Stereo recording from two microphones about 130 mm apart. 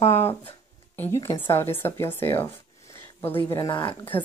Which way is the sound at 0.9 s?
20° left (ahead or behind).